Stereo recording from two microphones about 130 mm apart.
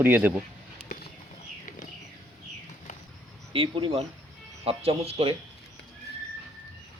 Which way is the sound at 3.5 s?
40° right (ahead or behind).